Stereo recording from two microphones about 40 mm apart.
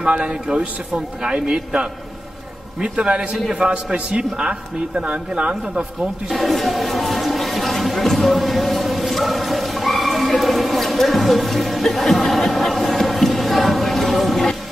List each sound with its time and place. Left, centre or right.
0.0 s speech: right
3.4 s a man's voice: centre
3.7 s speech: right
6.3 s a sound: centre